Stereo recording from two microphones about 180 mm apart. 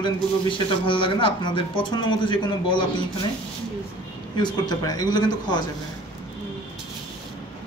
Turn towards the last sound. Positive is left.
turn(degrees=20)  # may be behind; listen again after turning